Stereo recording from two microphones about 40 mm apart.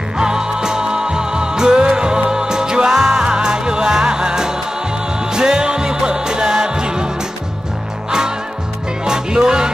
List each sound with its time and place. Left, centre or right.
0.2 s music: centre
9.0 s music: centre